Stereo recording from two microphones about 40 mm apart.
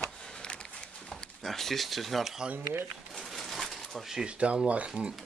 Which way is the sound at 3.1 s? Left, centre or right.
Centre.